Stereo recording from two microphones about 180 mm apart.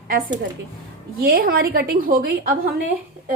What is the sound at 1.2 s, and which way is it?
A woman's voice, 55° right (ahead or behind).